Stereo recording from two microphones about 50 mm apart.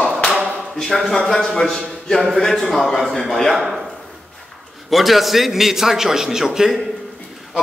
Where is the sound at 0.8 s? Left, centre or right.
Centre.